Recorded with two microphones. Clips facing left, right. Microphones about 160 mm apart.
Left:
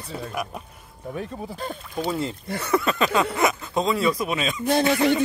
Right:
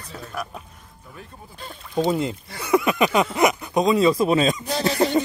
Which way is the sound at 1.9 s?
20° right (ahead or behind).